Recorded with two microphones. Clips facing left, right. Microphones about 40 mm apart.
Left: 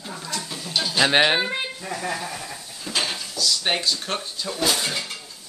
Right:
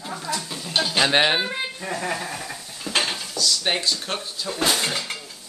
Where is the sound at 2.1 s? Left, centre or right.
Right.